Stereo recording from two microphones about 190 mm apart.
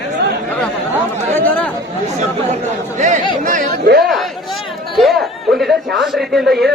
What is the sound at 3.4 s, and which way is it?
Speech, 40° right (ahead or behind).